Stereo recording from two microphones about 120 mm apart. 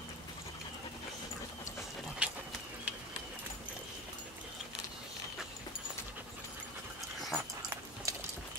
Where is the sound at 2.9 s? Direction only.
10° right (ahead or behind).